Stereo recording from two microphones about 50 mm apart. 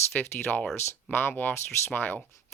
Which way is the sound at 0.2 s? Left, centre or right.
Left.